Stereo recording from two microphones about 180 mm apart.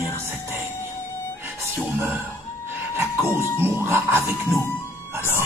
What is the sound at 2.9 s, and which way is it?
Music, 15° right (ahead or behind).